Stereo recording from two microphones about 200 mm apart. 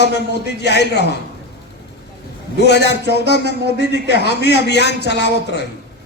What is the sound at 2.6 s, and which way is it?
A man's voice, 60° left (ahead or behind).